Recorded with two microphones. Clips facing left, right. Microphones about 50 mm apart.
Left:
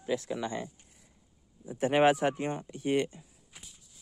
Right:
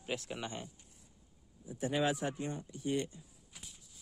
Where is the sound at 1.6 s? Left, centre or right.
Left.